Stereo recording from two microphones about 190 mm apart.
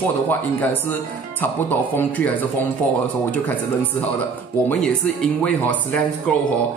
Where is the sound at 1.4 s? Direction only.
10° left (ahead or behind).